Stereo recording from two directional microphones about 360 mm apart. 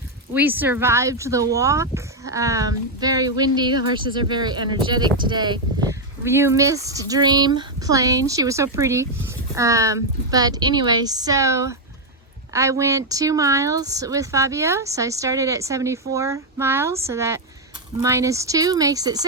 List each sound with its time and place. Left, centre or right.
0.3 s speech: centre